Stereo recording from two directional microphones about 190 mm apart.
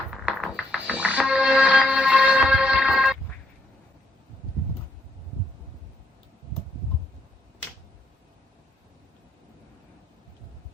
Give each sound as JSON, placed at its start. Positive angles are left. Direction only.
{"t": 0.3, "sound": "music", "side_deg": -5}